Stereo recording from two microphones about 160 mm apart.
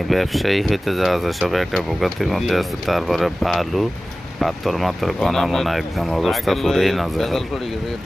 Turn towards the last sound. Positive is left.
turn(degrees=0)  # may be behind; listen again after turning